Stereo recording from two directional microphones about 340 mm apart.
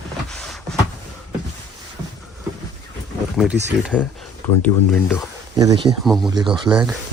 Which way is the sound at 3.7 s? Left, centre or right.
Centre.